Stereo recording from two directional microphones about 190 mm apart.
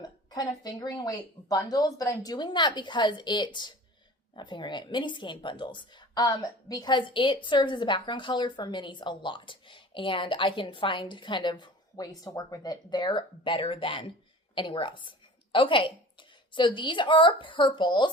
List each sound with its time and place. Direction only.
0.0 s a woman's voice: 20° left (ahead or behind)